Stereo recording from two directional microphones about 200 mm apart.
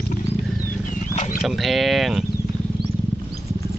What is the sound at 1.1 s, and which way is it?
Wild animals, 40° left (ahead or behind).